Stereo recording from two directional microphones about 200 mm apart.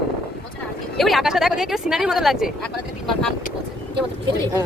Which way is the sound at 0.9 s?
Centre (ahead or behind).